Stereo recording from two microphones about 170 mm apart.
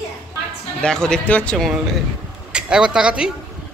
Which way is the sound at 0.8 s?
5° left (ahead or behind).